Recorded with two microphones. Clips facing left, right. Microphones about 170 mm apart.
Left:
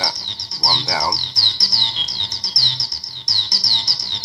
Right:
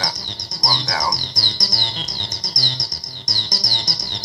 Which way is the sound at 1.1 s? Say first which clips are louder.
Right 3 dB; 50° right (ahead or behind).